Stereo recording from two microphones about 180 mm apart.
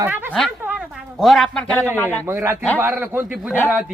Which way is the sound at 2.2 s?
15° right (ahead or behind).